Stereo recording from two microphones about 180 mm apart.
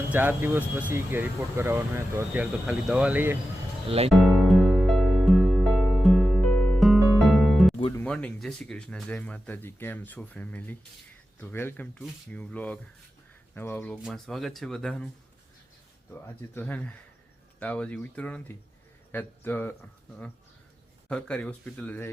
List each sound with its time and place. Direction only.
0.1 s speech: 10° right (ahead or behind)
3.8 s speech: 35° right (ahead or behind)
4.1 s music: centre (ahead or behind)
7.9 s speech: 5° left (ahead or behind)
16.1 s speech: 10° left (ahead or behind)
21.1 s speech: 5° left (ahead or behind)